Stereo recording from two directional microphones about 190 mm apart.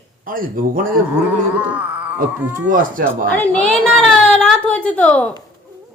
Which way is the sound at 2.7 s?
45° right (ahead or behind).